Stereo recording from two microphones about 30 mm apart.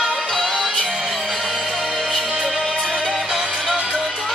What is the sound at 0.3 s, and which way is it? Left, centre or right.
Music, centre.